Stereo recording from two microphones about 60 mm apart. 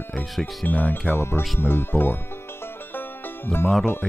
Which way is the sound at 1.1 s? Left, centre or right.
Left.